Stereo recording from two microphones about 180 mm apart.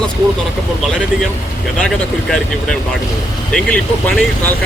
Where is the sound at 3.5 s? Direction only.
5° left (ahead or behind).